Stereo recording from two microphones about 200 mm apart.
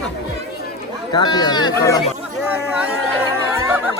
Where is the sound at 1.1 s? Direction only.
20° left (ahead or behind).